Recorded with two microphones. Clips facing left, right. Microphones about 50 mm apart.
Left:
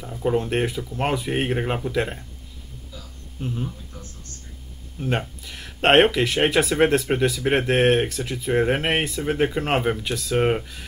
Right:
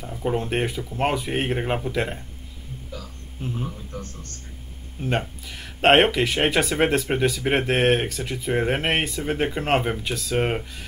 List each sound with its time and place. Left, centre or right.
0.0 s speech: centre
3.3 s speech: centre
3.6 s a man's voice: right
5.4 s speech: centre